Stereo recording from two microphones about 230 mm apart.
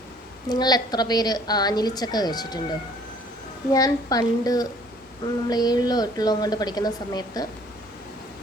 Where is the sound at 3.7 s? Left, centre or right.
Centre.